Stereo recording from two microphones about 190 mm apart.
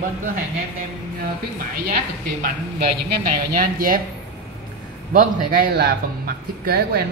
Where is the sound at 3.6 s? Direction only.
50° right (ahead or behind).